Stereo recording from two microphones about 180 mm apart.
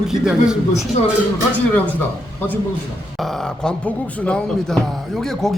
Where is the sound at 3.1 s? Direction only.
Centre (ahead or behind).